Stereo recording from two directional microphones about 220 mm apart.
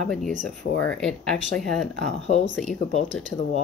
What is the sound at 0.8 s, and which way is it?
Speech, 5° left (ahead or behind).